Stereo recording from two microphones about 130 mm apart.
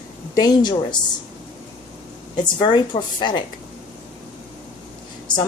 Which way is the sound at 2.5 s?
35° left (ahead or behind).